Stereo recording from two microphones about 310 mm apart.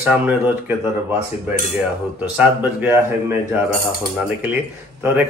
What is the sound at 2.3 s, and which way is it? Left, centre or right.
Speech, centre.